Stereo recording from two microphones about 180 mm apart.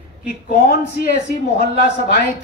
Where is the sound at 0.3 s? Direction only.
55° left (ahead or behind).